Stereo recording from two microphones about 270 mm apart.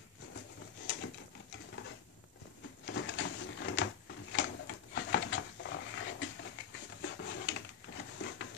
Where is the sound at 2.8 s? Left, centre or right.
Left.